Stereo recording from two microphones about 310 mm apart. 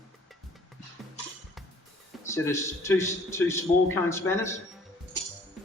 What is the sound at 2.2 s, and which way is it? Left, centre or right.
A man's voice, centre.